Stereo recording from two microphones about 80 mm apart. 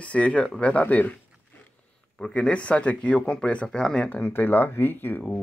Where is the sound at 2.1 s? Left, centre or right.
Centre.